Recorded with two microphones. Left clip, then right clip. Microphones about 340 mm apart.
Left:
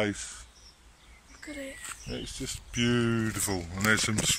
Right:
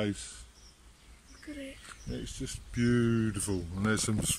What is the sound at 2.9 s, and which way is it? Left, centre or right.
Speech, left.